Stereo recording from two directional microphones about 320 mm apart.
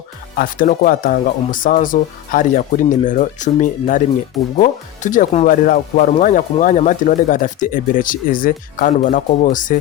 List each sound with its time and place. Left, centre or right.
0.3 s speech: left